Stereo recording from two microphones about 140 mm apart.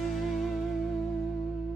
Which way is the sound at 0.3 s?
Centre (ahead or behind).